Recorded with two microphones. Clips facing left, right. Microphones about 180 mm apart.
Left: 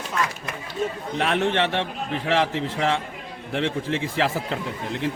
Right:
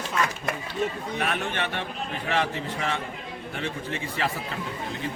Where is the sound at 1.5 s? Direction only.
85° left.